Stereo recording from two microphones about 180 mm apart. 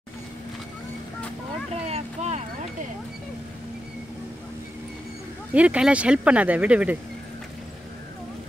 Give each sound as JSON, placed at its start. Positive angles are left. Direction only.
{"t": 1.7, "sound": "vehicle", "side_deg": -35}
{"t": 5.5, "sound": "speech", "side_deg": -5}